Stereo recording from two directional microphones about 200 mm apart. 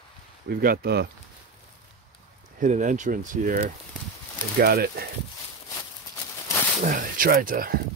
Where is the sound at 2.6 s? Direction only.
40° right (ahead or behind).